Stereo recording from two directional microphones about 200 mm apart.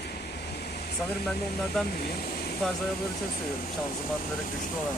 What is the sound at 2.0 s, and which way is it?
Speech, 50° left (ahead or behind).